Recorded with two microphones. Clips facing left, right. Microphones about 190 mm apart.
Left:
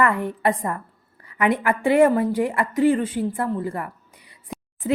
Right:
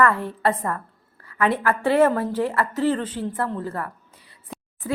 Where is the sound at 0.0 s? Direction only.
15° left (ahead or behind).